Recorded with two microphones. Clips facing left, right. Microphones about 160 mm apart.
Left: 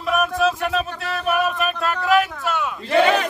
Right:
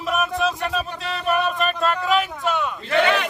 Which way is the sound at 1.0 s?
5° left (ahead or behind).